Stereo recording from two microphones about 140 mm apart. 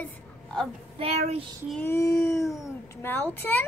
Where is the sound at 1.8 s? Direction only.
20° left (ahead or behind).